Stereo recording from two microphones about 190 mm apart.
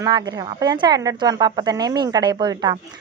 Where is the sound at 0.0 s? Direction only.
20° right (ahead or behind).